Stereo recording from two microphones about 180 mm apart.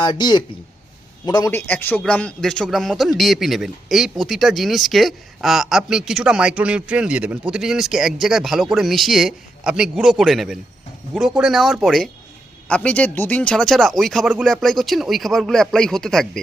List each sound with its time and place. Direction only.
0.0 s a man's voice: 25° left (ahead or behind); by 16.4 s 5° left (ahead or behind)